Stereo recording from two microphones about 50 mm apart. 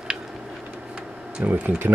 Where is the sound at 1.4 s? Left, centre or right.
Right.